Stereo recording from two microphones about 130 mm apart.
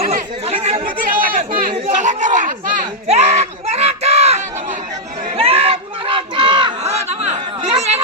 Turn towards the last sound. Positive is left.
turn(degrees=-55)  # may be behind; listen again after turning